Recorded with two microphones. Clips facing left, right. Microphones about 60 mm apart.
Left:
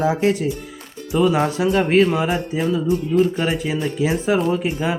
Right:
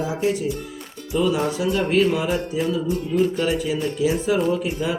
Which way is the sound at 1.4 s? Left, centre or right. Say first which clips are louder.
Left 4 dB; left.